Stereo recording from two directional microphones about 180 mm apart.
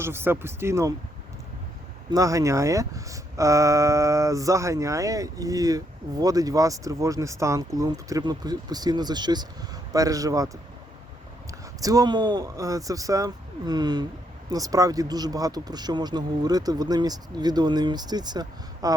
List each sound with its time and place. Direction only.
0.0 s speech: 10° right (ahead or behind)
2.0 s a man's voice: 20° right (ahead or behind)
11.8 s a man's voice: 20° right (ahead or behind)